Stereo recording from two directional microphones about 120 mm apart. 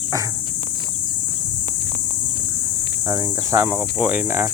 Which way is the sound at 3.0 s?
25° right (ahead or behind).